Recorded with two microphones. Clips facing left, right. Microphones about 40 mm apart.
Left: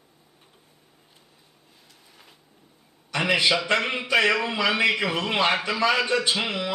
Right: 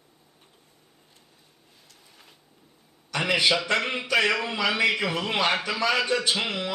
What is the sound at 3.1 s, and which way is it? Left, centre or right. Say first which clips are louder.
A man's voice: left 1 dB; centre.